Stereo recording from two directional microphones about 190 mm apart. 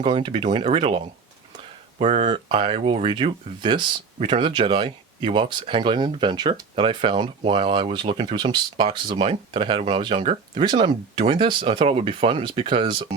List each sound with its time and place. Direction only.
0.0 s speech: 25° right (ahead or behind)